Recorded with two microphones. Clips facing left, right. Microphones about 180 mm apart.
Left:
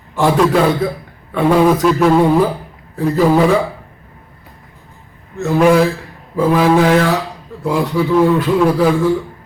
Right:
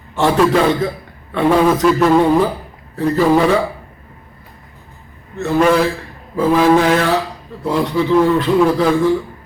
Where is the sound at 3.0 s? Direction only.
10° left (ahead or behind).